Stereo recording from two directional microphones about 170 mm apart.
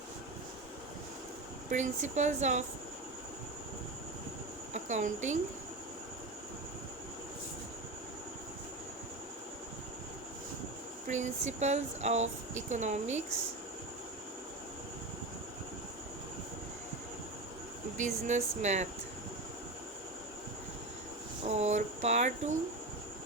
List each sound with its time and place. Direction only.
1.7 s speech: 45° right (ahead or behind)
4.7 s a woman's voice: 45° right (ahead or behind)
11.1 s speech: 45° right (ahead or behind)
17.9 s speech: 45° right (ahead or behind)
21.4 s a sound: 40° right (ahead or behind)